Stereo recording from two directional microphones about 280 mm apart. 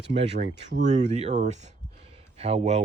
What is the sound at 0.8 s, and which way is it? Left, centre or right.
Speech, right.